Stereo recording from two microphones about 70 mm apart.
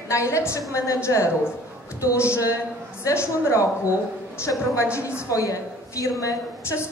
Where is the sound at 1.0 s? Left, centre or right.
Left.